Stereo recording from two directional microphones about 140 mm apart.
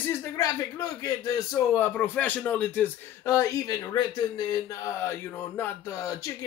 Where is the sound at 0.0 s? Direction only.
20° left (ahead or behind).